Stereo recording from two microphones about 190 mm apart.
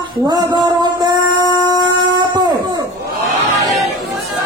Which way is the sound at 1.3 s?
20° left (ahead or behind).